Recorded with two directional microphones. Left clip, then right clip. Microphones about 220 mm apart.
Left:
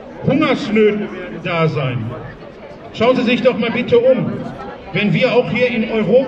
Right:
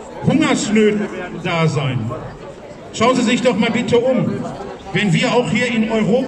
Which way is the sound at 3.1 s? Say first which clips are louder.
Left 1 dB; 40° right (ahead or behind).